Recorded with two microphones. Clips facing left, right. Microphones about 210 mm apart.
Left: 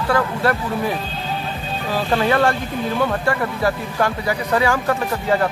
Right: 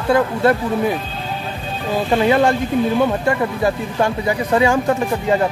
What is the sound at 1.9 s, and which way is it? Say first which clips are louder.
Speech: right 3 dB; 20° right (ahead or behind).